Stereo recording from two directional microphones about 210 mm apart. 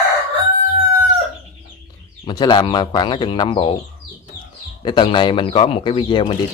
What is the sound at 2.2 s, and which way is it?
Speech, 20° left (ahead or behind).